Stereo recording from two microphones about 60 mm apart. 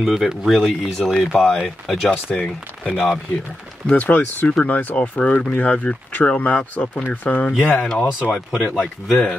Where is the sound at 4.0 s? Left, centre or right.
Left.